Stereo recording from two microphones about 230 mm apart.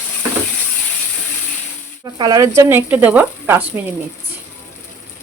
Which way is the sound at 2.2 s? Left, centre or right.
Centre.